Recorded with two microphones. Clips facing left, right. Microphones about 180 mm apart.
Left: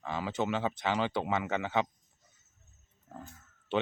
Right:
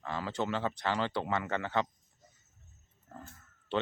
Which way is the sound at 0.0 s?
15° left (ahead or behind).